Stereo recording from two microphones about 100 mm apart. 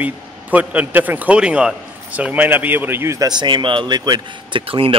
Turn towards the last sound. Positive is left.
turn(degrees=-65)  # may be behind; listen again after turning